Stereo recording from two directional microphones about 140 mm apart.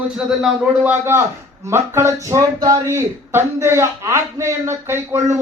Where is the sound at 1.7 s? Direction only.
20° right (ahead or behind).